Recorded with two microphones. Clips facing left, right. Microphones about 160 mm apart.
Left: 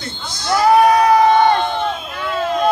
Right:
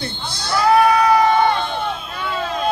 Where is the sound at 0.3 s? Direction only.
60° right (ahead or behind).